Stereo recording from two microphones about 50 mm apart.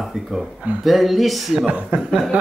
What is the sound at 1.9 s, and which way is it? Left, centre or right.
Speech, right.